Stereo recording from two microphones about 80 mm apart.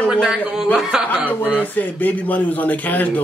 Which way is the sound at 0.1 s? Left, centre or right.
Centre.